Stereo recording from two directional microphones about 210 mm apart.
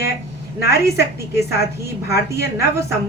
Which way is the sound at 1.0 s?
15° right (ahead or behind).